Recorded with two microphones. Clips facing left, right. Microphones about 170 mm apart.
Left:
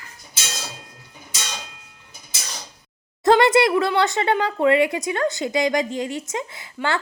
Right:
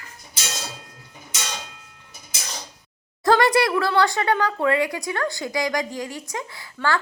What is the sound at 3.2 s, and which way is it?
Speech, 25° left (ahead or behind).